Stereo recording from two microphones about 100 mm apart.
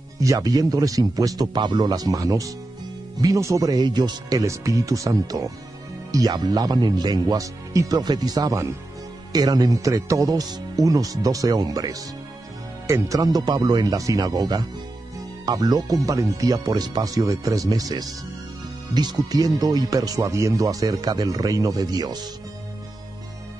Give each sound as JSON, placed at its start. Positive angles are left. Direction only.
{"t": 0.2, "sound": "speech", "side_deg": -35}